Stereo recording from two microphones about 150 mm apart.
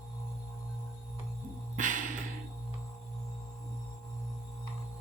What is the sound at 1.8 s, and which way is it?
Music, 60° right (ahead or behind).